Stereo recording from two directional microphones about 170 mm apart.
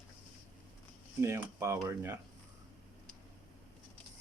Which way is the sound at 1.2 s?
15° right (ahead or behind).